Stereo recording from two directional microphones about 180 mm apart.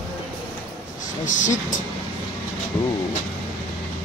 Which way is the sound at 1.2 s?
45° left (ahead or behind).